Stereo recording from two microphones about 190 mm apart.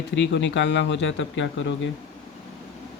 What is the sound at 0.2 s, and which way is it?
Speech, 70° left (ahead or behind).